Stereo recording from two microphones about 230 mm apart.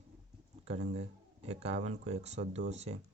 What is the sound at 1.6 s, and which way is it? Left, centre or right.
Speech, right.